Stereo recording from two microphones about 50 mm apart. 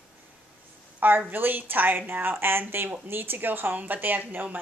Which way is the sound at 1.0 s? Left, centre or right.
Right.